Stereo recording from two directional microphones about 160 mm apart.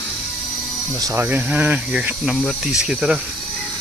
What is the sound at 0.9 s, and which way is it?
A man's voice, 20° right (ahead or behind).